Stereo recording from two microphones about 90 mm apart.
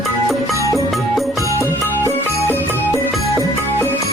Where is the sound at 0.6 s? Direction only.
35° right (ahead or behind).